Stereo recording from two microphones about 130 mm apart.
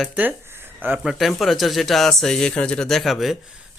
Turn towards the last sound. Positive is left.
turn(degrees=0)  # may be behind; listen again after turning